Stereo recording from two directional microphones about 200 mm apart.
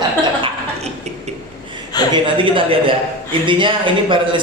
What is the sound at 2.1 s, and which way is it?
A man's voice, 25° right (ahead or behind).